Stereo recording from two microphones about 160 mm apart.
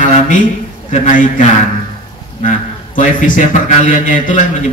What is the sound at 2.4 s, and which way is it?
A man's voice, 55° left (ahead or behind).